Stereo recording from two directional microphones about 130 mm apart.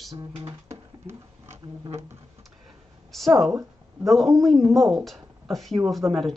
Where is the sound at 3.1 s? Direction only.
Centre (ahead or behind).